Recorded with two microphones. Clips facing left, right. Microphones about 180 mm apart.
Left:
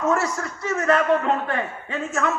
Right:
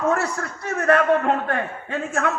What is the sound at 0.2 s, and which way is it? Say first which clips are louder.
A man's voice: left 1 dB; 60° right (ahead or behind).